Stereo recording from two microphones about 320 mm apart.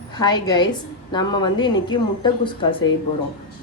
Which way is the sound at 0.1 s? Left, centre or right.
Centre.